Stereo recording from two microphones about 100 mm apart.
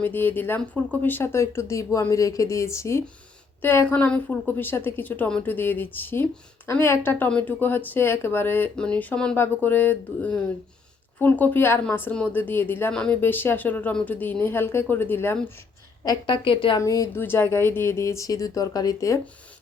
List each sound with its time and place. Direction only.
0.0 s a woman's voice: 20° left (ahead or behind)
3.9 s a woman's voice: 15° left (ahead or behind)
12.9 s speech: 10° left (ahead or behind)
13.2 s a woman's voice: 20° left (ahead or behind)
16.2 s speech: 60° left (ahead or behind)
16.8 s a woman's voice: 30° left (ahead or behind)